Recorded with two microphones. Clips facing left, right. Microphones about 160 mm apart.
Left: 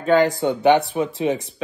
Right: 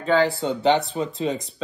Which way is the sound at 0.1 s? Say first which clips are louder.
Left 3 dB; 15° left (ahead or behind).